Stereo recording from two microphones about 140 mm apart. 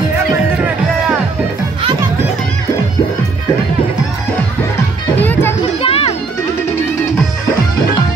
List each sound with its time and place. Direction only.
5.2 s music: 10° left (ahead or behind)
5.8 s music: 45° left (ahead or behind)